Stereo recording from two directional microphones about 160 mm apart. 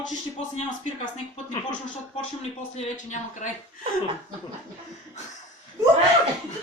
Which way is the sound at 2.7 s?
50° left (ahead or behind).